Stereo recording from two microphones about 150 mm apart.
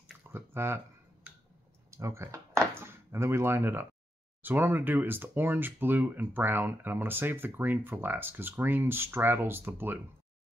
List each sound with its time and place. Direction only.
0.0 s chewing: 15° right (ahead or behind)
1.9 s a sound: 20° right (ahead or behind)
2.7 s speech: 15° right (ahead or behind)